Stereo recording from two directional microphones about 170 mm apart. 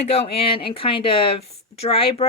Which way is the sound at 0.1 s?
35° left (ahead or behind).